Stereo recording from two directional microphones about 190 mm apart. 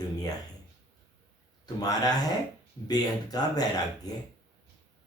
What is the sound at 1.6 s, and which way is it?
Speech, 20° left (ahead or behind).